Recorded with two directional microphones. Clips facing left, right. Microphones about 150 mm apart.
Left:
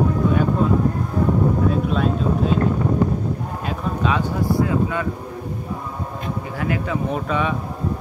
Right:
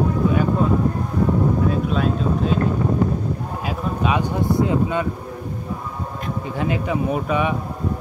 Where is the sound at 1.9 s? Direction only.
Centre (ahead or behind).